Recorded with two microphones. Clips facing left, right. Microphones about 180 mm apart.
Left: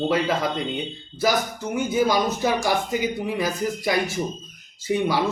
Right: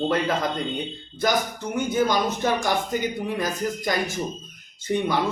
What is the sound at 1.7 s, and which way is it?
Speech, 10° left (ahead or behind).